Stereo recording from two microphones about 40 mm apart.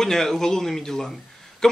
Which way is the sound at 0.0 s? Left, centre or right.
Centre.